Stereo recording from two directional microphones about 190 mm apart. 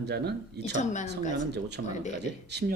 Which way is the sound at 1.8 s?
65° right (ahead or behind).